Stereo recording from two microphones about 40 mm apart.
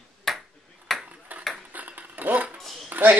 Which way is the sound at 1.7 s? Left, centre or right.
Right.